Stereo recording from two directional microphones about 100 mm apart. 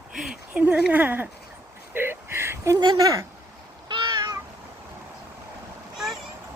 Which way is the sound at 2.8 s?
40° right (ahead or behind).